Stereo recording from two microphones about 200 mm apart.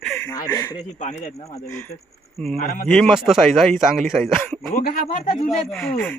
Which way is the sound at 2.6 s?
50° left (ahead or behind).